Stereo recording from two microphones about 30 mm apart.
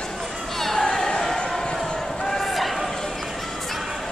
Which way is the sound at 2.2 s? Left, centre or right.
Centre.